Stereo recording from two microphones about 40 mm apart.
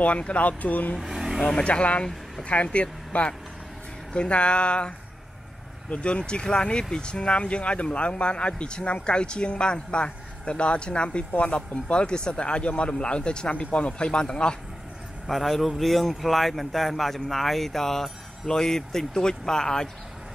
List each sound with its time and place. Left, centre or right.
0.0 s speech: left
1.0 s vehicle: centre
1.6 s speech: left
15.2 s speech: centre